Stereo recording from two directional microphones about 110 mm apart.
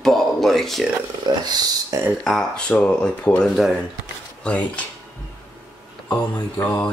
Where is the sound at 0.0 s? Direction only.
5° left (ahead or behind).